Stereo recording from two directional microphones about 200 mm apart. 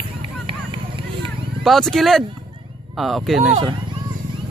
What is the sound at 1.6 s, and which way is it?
Speech, centre (ahead or behind).